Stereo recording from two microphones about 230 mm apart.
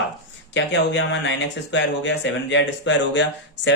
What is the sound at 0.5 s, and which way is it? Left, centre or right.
Speech, left.